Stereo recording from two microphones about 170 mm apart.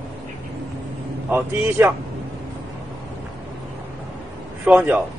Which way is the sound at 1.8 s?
15° right (ahead or behind).